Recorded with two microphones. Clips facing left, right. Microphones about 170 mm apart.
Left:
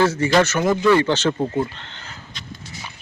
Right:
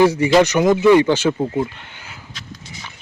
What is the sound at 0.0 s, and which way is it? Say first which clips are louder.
Speech: right 4 dB; 15° right (ahead or behind).